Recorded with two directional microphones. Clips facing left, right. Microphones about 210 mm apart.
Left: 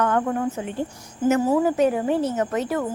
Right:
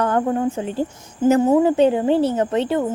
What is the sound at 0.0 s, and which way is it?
A woman's voice, 30° right (ahead or behind).